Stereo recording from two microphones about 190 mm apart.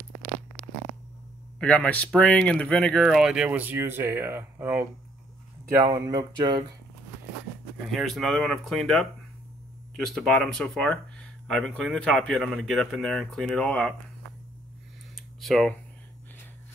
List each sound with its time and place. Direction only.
1.6 s speech: 5° left (ahead or behind); by 6.6 s 25° right (ahead or behind)
7.9 s speech: centre (ahead or behind)
10.0 s speech: 5° left (ahead or behind)
15.1 s a sound: centre (ahead or behind)